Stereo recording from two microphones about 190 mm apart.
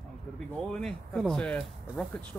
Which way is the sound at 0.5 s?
5° left (ahead or behind).